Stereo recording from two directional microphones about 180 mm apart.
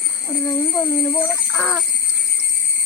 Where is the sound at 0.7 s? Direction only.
10° left (ahead or behind).